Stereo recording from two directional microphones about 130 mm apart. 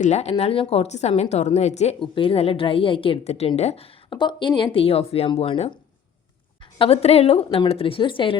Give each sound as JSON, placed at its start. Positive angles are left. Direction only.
{"t": 0.0, "sound": "a woman's voice", "side_deg": 60}
{"t": 2.0, "sound": "a woman's voice", "side_deg": 45}
{"t": 4.1, "sound": "a woman's voice", "side_deg": 35}
{"t": 6.7, "sound": "a woman's voice", "side_deg": 50}